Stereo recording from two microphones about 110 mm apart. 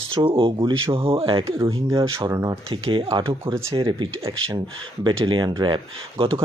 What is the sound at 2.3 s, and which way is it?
Speech, 30° right (ahead or behind).